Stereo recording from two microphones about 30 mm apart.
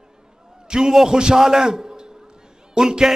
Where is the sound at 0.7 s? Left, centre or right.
Centre.